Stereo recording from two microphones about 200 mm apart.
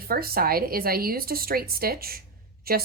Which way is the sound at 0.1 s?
50° right (ahead or behind).